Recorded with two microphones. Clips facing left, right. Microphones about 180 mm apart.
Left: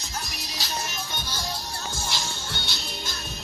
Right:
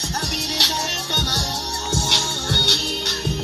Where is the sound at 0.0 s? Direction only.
70° right (ahead or behind).